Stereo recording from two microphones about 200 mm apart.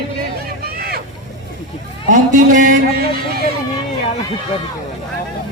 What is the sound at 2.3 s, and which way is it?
Speech, 40° right (ahead or behind).